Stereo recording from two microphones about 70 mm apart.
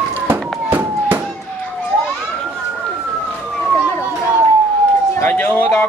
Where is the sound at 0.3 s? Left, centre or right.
Right.